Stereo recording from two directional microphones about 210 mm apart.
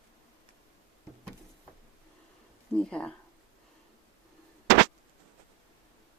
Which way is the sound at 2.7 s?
5° left (ahead or behind).